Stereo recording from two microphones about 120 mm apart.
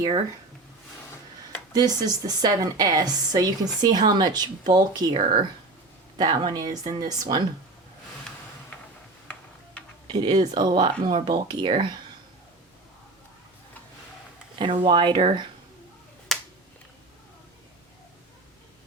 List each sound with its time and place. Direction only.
1.7 s a woman's voice: 30° right (ahead or behind)
10.1 s a woman's voice: 35° right (ahead or behind)
14.6 s speech: 45° right (ahead or behind)
16.3 s finger snapping: centre (ahead or behind)